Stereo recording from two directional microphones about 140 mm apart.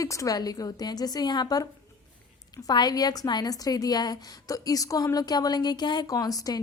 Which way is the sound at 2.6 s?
30° left (ahead or behind).